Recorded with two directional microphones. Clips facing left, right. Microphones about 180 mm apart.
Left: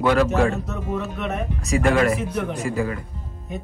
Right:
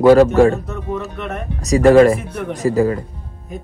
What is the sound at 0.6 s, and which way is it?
Speech, 5° left (ahead or behind).